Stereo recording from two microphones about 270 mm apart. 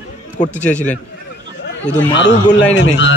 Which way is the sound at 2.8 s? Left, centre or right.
Left.